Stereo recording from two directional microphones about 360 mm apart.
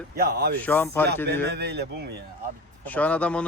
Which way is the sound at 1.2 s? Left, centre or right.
Right.